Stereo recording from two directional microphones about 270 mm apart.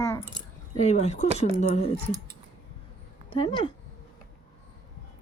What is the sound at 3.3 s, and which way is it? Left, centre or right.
Speech, centre.